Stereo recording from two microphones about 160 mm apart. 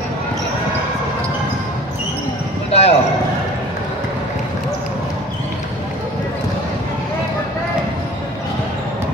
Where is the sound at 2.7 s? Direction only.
40° left (ahead or behind).